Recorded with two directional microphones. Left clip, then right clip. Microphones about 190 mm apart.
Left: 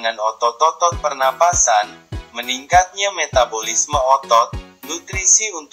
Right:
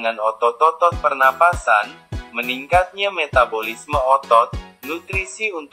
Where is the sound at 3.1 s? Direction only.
40° left (ahead or behind).